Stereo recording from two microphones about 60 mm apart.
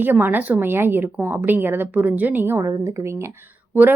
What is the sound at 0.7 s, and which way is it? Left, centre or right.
Speech, right.